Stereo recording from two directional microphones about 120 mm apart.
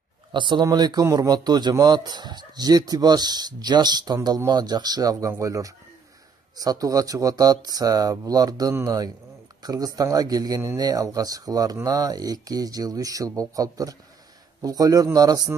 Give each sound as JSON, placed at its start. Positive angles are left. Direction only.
{"t": 0.3, "sound": "speech", "side_deg": -40}